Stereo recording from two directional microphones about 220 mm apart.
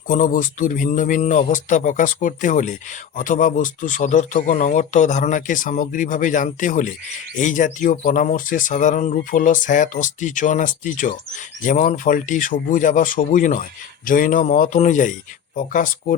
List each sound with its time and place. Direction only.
0.1 s speech: 40° left (ahead or behind)